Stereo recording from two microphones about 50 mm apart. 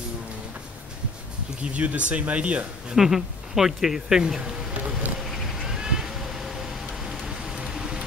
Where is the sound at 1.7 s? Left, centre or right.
Right.